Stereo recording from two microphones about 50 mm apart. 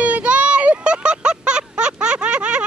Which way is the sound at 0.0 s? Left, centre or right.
Right.